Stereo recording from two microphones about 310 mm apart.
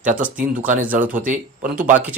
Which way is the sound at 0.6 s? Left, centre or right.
Right.